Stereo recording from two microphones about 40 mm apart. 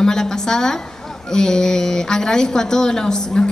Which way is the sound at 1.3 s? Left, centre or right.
Centre.